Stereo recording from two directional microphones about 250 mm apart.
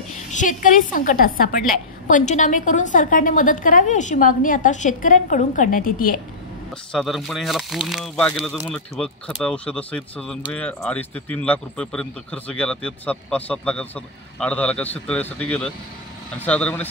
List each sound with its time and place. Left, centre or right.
0.3 s a woman's voice: left
6.9 s speech: centre